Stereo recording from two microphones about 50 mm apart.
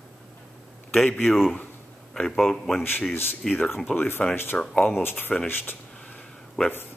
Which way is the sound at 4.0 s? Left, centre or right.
Left.